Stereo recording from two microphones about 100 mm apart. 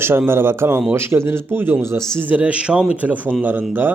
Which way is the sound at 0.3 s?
25° right (ahead or behind).